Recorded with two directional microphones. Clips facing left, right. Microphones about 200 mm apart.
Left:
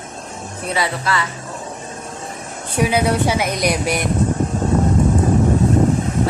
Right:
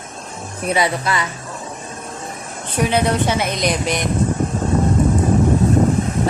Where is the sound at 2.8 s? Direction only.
10° left (ahead or behind).